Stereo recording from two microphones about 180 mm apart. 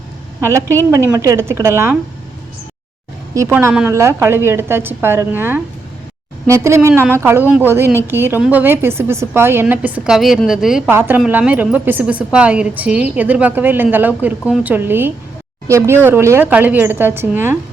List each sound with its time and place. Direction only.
0.4 s a woman's voice: 15° right (ahead or behind)
3.3 s a woman's voice: 15° right (ahead or behind)